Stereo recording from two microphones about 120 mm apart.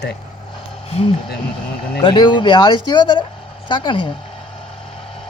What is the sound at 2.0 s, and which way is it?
Speech, 40° left (ahead or behind).